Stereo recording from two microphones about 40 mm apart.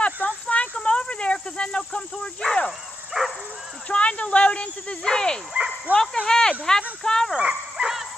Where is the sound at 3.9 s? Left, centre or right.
Left.